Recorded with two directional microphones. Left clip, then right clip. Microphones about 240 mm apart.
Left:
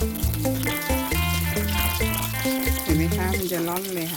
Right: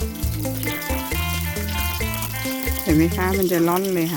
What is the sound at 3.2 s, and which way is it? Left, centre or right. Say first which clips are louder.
Speech: right 6 dB; right.